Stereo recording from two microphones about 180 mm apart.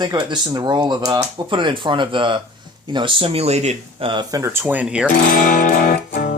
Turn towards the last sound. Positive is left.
turn(degrees=55)  # may be behind; listen again after turning